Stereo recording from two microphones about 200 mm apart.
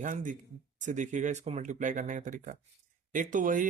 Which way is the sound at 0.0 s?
40° right (ahead or behind).